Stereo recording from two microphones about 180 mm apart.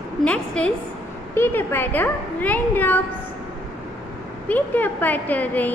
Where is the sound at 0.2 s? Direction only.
5° left (ahead or behind).